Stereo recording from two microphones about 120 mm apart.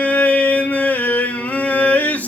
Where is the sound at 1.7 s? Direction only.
15° left (ahead or behind).